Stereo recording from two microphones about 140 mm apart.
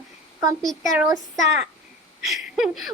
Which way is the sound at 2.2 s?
Centre (ahead or behind).